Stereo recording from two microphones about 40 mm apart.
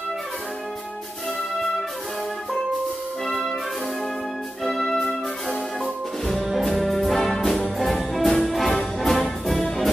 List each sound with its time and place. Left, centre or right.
4.6 s music: centre
4.9 s music: centre
6.2 s brass instrument: centre
7.8 s music: centre